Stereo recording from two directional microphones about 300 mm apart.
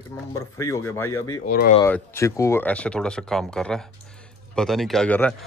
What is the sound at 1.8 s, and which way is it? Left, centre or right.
Speech, centre.